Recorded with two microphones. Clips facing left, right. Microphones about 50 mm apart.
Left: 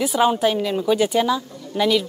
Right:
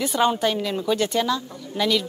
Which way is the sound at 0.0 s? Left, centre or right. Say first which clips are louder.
Left 3 dB; centre.